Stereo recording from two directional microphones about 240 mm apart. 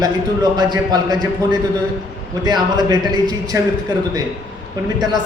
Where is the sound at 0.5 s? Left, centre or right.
Centre.